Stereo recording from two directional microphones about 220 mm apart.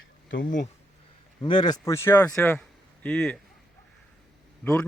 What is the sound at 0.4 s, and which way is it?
Speech, 35° left (ahead or behind).